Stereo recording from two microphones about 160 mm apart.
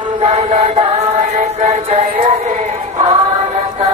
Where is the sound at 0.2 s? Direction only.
40° right (ahead or behind).